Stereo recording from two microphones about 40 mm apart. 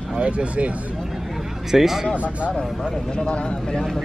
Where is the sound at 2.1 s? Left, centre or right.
Right.